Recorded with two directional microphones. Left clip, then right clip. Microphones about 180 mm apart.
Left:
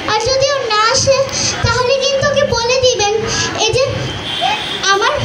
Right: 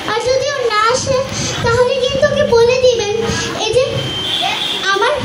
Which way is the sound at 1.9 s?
50° right (ahead or behind).